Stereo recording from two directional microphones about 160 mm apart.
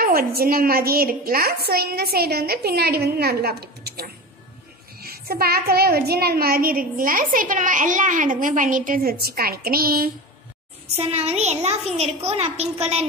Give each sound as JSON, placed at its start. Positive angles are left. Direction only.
{"t": 0.0, "sound": "a woman's voice", "side_deg": -70}
{"t": 5.0, "sound": "a woman's voice", "side_deg": -70}
{"t": 11.0, "sound": "a child's voice", "side_deg": -40}